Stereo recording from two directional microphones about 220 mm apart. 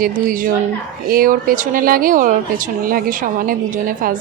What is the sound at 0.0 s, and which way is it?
Speech, 40° right (ahead or behind).